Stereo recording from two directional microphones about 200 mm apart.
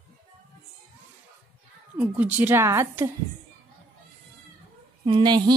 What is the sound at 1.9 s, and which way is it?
A woman's voice, 10° right (ahead or behind).